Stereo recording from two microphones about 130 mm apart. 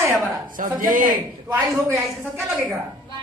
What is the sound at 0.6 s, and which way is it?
Speech, 90° right.